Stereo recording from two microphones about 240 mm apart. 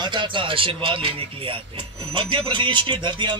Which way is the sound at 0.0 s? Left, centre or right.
Centre.